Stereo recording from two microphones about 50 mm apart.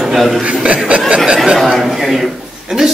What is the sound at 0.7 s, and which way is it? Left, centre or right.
Speech, right.